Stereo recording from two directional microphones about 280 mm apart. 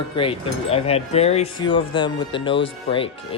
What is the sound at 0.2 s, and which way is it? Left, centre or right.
Speech, centre.